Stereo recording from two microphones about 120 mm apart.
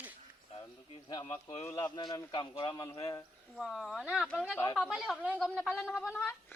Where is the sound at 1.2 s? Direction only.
65° left (ahead or behind).